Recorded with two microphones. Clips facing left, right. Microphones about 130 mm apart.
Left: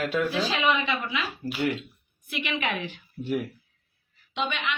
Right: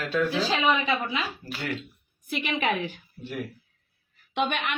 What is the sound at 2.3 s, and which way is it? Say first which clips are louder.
Speech: right 3 dB; 40° right (ahead or behind).